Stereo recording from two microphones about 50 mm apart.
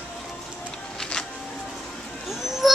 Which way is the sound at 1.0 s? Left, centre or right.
Centre.